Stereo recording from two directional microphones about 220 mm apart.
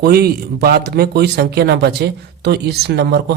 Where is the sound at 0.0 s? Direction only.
45° right (ahead or behind).